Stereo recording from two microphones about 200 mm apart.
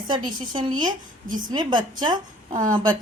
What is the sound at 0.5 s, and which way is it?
A woman's voice, 25° right (ahead or behind).